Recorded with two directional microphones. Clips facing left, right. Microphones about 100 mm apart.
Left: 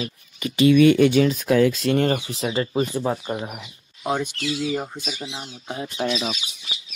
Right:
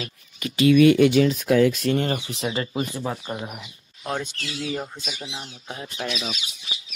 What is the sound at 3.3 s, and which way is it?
Speech, 15° left (ahead or behind).